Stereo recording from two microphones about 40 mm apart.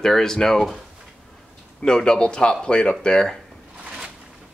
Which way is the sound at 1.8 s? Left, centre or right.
Centre.